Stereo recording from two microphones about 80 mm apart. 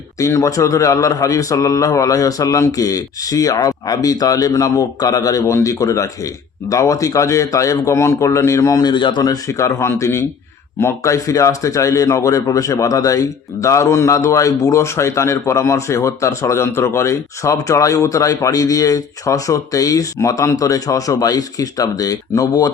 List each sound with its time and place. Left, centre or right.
0.2 s a man's voice: left
8.9 s speech: left
9.5 s speech: left